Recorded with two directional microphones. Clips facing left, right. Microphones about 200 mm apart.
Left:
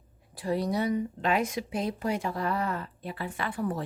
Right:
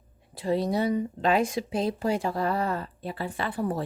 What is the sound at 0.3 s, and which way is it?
Speech, 25° right (ahead or behind).